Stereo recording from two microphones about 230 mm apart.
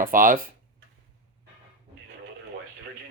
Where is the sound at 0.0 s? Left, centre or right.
Right.